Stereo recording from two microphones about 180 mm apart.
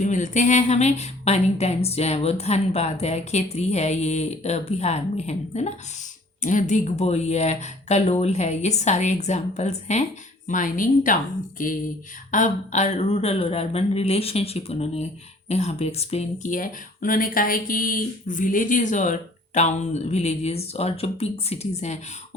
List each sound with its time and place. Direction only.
0.0 s a woman's voice: 45° left (ahead or behind)